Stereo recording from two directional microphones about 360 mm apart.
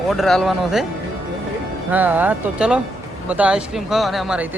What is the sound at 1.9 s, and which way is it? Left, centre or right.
Speech, centre.